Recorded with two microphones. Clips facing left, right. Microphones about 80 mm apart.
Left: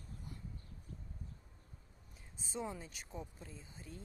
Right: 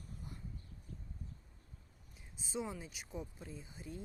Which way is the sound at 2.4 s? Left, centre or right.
Centre.